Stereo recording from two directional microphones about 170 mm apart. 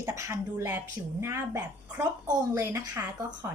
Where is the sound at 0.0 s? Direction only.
20° right (ahead or behind).